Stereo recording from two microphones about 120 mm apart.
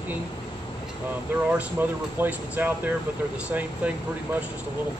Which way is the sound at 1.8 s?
15° right (ahead or behind).